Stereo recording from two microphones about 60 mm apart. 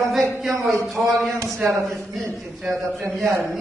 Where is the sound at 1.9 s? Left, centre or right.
Centre.